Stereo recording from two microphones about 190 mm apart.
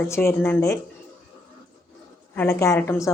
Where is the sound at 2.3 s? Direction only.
15° left (ahead or behind).